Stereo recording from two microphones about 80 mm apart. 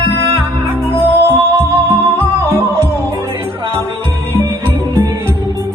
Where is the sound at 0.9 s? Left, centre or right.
Right.